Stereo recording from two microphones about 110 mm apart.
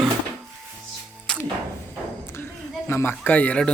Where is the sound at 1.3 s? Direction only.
5° left (ahead or behind).